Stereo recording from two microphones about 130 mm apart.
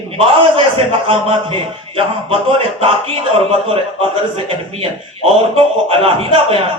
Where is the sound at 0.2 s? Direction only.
45° right (ahead or behind).